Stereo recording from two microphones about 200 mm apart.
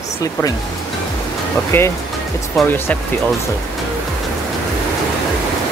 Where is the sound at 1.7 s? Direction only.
10° left (ahead or behind).